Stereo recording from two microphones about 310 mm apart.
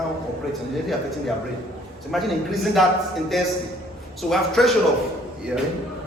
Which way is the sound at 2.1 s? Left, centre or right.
Centre.